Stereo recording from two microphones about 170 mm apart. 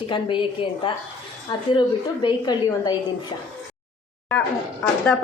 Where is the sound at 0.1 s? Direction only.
30° left (ahead or behind).